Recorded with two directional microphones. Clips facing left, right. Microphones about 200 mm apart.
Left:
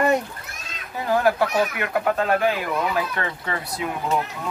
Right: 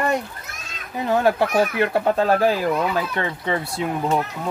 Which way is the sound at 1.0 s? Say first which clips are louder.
Right 1 dB; 25° right (ahead or behind).